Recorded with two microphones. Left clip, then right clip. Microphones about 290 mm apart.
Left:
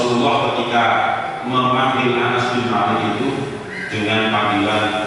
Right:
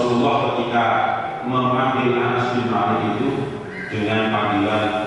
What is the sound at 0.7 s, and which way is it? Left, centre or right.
A man's voice, centre.